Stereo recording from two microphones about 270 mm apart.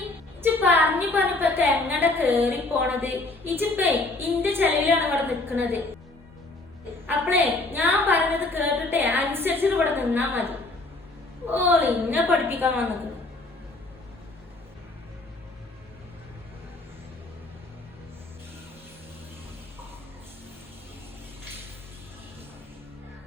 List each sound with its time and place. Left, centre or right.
0.4 s a woman's voice: centre
7.1 s a woman's voice: centre